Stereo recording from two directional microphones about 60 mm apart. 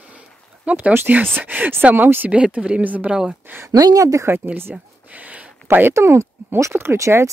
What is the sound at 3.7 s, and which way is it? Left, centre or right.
Speech, right.